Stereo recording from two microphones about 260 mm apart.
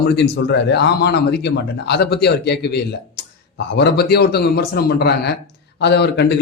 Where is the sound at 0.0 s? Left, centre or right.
Left.